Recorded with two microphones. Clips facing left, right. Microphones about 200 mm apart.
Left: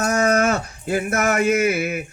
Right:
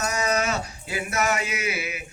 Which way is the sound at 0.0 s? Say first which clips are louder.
Left 7 dB; 50° left (ahead or behind).